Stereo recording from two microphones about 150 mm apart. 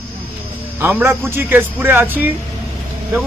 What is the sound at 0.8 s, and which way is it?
Speech, 15° right (ahead or behind).